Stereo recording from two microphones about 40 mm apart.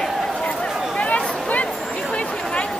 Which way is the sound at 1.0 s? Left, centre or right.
Left.